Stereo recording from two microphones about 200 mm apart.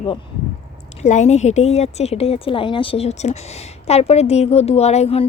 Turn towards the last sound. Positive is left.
turn(degrees=30)  # may be behind; listen again after turning